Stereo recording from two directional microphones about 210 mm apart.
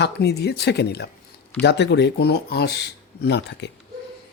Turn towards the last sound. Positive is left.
turn(degrees=55)  # may be behind; listen again after turning